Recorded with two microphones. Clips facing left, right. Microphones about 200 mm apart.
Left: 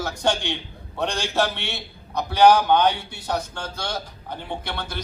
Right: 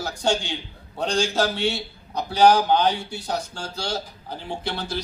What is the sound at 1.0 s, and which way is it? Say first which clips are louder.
Speech: right 1 dB; 60° left (ahead or behind).